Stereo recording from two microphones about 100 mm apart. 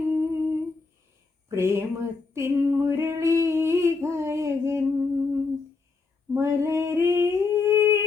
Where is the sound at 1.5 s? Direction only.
25° right (ahead or behind).